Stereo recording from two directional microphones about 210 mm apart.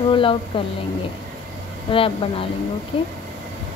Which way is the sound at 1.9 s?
25° left (ahead or behind).